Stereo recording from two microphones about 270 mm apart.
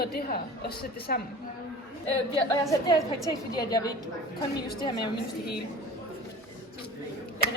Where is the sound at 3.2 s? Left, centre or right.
Centre.